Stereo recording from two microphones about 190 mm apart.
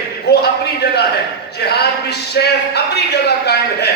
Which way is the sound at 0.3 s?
60° left (ahead or behind).